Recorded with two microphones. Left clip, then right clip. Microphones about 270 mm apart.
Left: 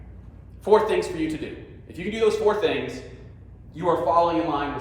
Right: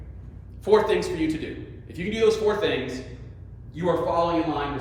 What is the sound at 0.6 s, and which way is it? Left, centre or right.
A man's voice, centre.